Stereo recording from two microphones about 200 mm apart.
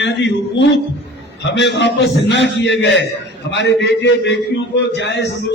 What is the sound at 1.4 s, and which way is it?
A man's voice, 60° left (ahead or behind).